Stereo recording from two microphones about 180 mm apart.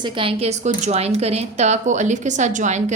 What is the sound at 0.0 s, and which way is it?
A woman's voice, 30° right (ahead or behind).